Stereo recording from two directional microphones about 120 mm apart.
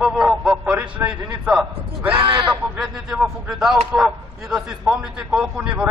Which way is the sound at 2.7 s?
10° right (ahead or behind).